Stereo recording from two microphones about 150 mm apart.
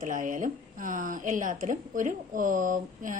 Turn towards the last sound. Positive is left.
turn(degrees=-60)  # may be behind; listen again after turning